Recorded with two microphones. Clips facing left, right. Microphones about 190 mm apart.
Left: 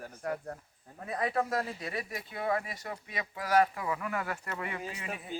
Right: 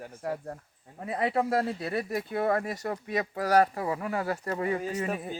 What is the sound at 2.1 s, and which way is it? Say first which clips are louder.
Speech: right 5 dB; 50° right (ahead or behind).